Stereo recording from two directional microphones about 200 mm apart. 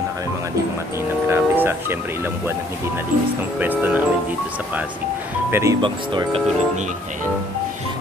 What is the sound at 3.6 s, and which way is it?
Speech, 10° right (ahead or behind).